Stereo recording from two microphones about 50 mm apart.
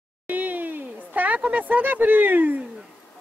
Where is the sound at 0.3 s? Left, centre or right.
Right.